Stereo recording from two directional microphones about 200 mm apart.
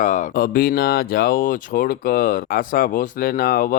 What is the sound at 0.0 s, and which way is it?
Speech, 40° left (ahead or behind).